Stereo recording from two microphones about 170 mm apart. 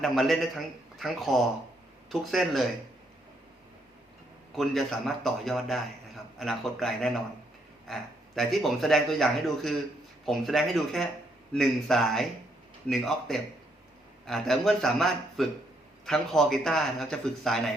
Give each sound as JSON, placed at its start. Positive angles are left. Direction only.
{"t": 0.0, "sound": "speech", "side_deg": 0}
{"t": 4.5, "sound": "speech", "side_deg": 0}